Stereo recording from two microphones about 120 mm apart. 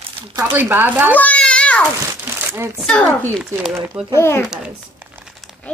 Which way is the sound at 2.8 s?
5° left (ahead or behind).